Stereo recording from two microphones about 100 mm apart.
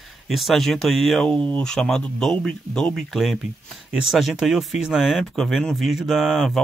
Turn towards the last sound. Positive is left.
turn(degrees=0)  # may be behind; listen again after turning